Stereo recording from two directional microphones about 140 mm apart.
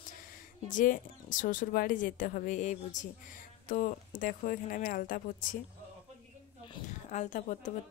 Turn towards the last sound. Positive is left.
turn(degrees=60)  # may be behind; listen again after turning